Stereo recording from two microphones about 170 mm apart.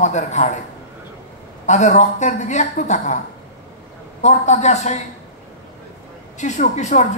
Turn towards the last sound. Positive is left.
turn(degrees=40)  # may be behind; listen again after turning